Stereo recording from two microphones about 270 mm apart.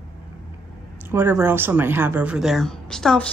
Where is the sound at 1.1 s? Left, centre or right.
Centre.